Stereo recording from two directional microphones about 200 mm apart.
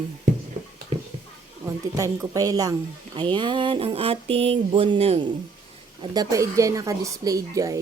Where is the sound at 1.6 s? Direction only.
15° right (ahead or behind).